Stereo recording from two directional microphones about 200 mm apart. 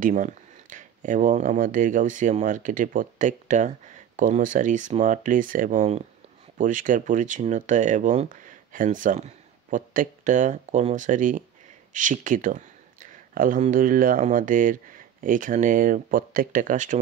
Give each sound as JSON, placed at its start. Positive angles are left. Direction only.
{"t": 0.0, "sound": "speech", "side_deg": -40}